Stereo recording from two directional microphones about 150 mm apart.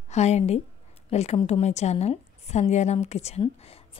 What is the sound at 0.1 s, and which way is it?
A woman's voice, 50° left (ahead or behind).